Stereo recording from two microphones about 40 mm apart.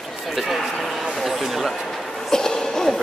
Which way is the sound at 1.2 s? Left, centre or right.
Centre.